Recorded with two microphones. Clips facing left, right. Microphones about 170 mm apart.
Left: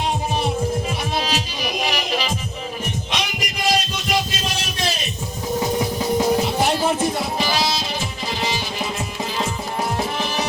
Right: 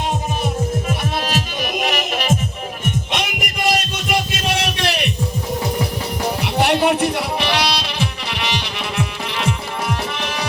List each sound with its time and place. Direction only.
1.2 s music: 50° right (ahead or behind)
3.1 s a sound: 55° right (ahead or behind)
6.4 s music: 70° right (ahead or behind)